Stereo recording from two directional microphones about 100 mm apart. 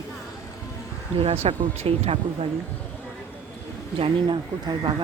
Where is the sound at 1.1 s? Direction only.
85° right.